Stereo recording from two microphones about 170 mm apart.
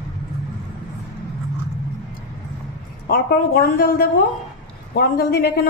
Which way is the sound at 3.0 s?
65° left (ahead or behind).